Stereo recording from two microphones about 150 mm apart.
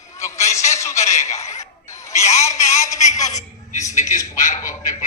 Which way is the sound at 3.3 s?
50° left (ahead or behind).